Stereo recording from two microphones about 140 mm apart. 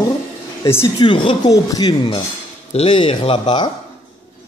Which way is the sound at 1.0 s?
35° left (ahead or behind).